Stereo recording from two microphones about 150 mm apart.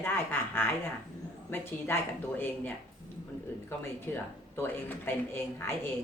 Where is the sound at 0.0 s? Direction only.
15° left (ahead or behind).